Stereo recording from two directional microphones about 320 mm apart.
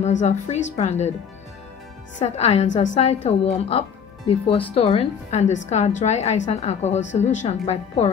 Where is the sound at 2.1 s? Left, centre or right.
Centre.